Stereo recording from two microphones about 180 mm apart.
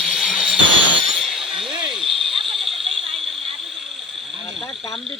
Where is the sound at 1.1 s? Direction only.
Centre (ahead or behind).